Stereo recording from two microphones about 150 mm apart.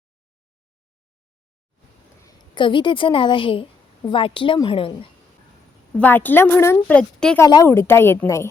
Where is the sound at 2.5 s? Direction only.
30° left (ahead or behind).